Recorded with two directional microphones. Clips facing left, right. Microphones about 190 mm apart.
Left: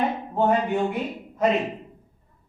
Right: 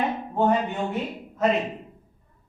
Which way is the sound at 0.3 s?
5° left (ahead or behind).